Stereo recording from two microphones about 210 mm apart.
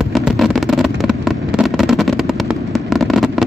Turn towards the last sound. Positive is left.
turn(degrees=0)  # may be behind; listen again after turning